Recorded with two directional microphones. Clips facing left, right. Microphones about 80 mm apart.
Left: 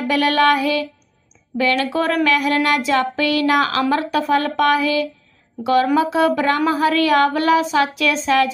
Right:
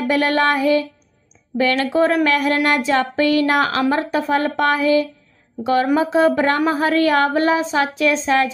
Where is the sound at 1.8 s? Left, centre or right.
Right.